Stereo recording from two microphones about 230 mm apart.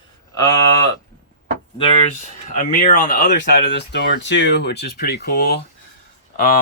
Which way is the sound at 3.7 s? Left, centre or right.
Left.